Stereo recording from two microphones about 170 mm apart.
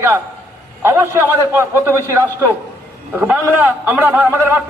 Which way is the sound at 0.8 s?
15° right (ahead or behind).